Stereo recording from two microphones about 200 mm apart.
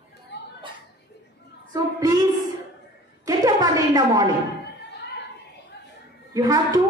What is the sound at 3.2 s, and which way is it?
A woman's voice, 20° right (ahead or behind).